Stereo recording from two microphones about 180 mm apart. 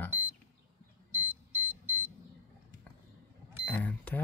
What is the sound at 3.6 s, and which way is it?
Speech, 10° left (ahead or behind).